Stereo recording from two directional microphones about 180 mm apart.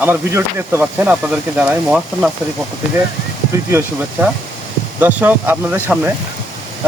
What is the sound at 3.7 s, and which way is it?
Speech, 10° right (ahead or behind).